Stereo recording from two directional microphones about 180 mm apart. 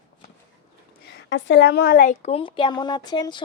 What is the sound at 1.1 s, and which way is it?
A woman's voice, 75° left (ahead or behind).